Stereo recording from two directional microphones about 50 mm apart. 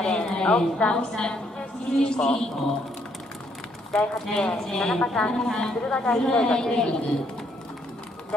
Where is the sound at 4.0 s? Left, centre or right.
Centre.